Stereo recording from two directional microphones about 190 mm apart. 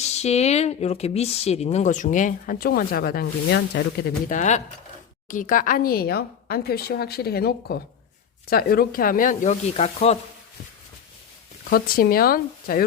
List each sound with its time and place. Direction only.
0.0 s speech: 35° left (ahead or behind); by 4.4 s 55° left (ahead or behind)
4.4 s speech: 40° left (ahead or behind)
11.7 s speech: 50° left (ahead or behind)